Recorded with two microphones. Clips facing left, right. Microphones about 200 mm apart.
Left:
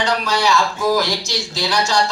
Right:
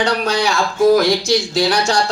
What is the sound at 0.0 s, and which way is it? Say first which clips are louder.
A woman's voice: right 2 dB; 55° right (ahead or behind).